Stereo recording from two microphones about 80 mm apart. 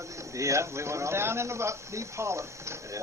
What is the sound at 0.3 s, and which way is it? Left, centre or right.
A man's voice, right.